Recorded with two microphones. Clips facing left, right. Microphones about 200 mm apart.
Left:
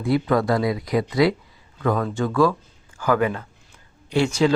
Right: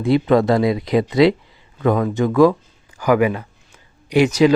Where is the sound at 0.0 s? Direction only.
25° right (ahead or behind).